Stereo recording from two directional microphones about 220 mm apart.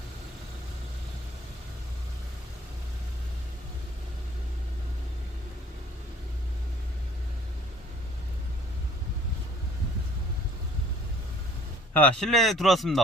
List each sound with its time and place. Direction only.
11.9 s speech: 5° left (ahead or behind)